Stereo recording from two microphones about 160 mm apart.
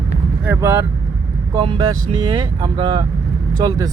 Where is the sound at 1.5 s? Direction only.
25° right (ahead or behind).